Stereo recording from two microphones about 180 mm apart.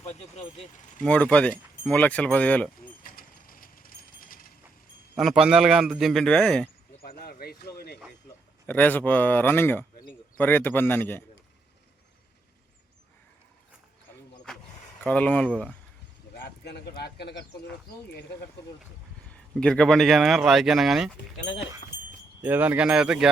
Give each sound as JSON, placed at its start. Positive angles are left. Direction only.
{"t": 0.0, "sound": "speech", "side_deg": 35}
{"t": 1.0, "sound": "speech", "side_deg": 5}
{"t": 3.0, "sound": "a sound", "side_deg": 50}
{"t": 5.1, "sound": "speech", "side_deg": 0}
{"t": 7.0, "sound": "speech", "side_deg": 55}
{"t": 8.6, "sound": "speech", "side_deg": 10}
{"t": 14.5, "sound": "a sound", "side_deg": 5}
{"t": 15.0, "sound": "speech", "side_deg": 5}
{"t": 16.4, "sound": "speech", "side_deg": 65}
{"t": 19.3, "sound": "speech", "side_deg": 5}
{"t": 22.4, "sound": "speech", "side_deg": -10}